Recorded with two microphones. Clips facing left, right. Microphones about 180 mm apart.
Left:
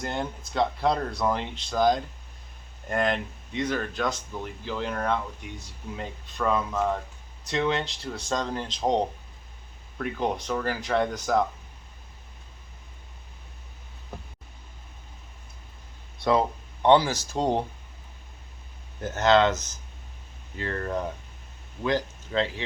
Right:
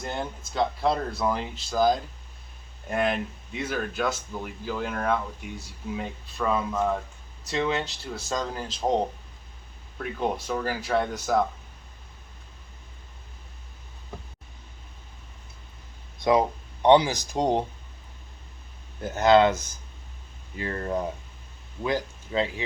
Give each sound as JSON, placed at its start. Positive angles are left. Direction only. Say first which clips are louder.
{"t": 0.0, "sound": "speech", "louder": "left 1 dB", "side_deg": 0}
{"t": 10.0, "sound": "speech", "louder": "even", "side_deg": -5}
{"t": 16.2, "sound": "speech", "louder": "right 2 dB", "side_deg": -15}
{"t": 19.0, "sound": "speech", "louder": "right 2 dB", "side_deg": -10}